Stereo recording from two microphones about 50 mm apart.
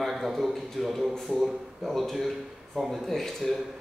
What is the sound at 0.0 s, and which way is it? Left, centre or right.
A man's voice, centre.